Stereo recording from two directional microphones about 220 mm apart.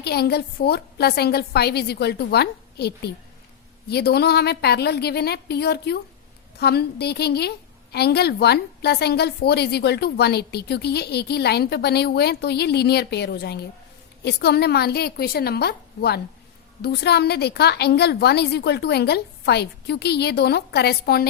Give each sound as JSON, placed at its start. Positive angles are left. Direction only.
{"t": 0.0, "sound": "a woman's voice", "side_deg": 45}